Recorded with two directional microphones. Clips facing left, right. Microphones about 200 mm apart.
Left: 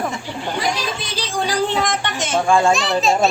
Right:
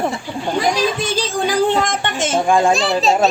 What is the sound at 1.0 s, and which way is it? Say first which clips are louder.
Music: right 5 dB; 45° right (ahead or behind).